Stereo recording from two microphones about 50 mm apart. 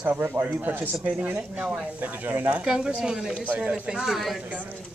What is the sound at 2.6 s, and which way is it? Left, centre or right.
Speech, centre.